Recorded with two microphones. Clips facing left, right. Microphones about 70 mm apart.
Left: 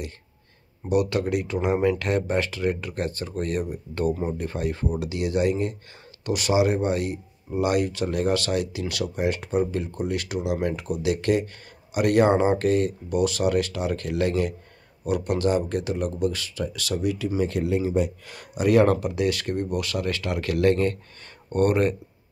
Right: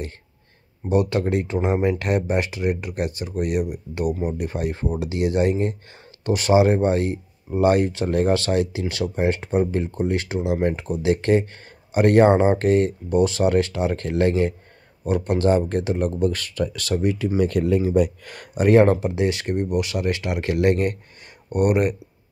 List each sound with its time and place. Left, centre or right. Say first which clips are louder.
0.8 s speech: right 2 dB; right
17.4 s speech: right 5 dB; right; by 21.9 s centre